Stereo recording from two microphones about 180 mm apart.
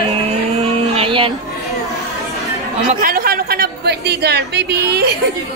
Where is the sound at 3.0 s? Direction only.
55° right (ahead or behind).